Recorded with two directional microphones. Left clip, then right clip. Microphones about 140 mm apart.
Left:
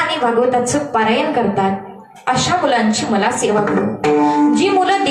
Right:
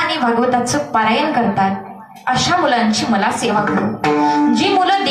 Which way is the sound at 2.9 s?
40° right (ahead or behind).